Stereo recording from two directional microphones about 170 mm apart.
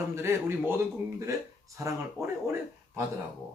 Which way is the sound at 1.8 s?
15° right (ahead or behind).